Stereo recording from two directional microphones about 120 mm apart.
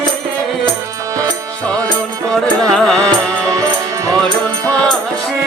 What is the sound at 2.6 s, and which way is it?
Music, 5° left (ahead or behind).